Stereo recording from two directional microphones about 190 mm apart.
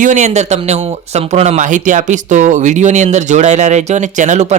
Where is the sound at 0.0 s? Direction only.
40° right (ahead or behind).